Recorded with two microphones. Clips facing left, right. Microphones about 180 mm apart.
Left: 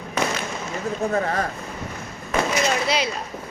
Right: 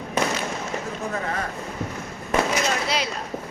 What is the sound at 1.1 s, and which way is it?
Speech, 40° left (ahead or behind).